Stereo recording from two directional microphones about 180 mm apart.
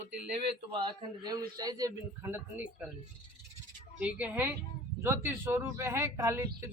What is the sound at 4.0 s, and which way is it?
A man's voice, 10° right (ahead or behind).